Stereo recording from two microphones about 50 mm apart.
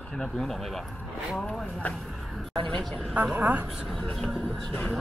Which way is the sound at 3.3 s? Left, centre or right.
Right.